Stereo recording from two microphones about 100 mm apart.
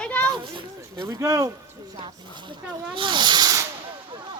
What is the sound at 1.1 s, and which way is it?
Speech, 35° right (ahead or behind).